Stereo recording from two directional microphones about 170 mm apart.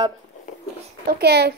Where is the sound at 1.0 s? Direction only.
75° right (ahead or behind).